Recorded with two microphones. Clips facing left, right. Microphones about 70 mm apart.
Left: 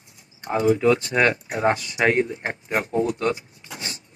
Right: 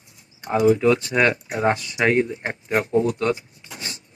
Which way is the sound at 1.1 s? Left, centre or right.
Centre.